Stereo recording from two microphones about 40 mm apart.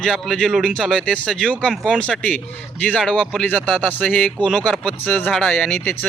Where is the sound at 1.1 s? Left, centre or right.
Centre.